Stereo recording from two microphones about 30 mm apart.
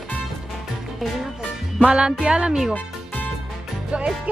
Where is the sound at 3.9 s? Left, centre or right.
Right.